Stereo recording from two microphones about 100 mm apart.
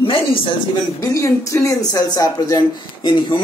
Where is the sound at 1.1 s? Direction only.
30° left (ahead or behind).